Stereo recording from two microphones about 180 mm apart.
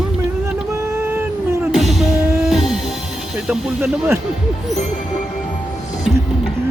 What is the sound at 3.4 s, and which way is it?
Speech, 15° right (ahead or behind).